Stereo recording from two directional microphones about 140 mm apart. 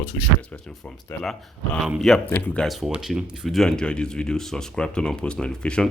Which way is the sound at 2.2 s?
15° left (ahead or behind).